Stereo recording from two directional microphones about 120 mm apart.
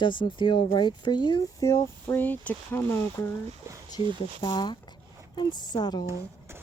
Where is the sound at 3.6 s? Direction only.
25° right (ahead or behind).